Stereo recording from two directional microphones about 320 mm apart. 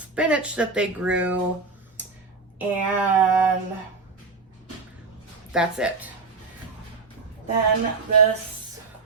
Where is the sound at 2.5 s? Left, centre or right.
Centre.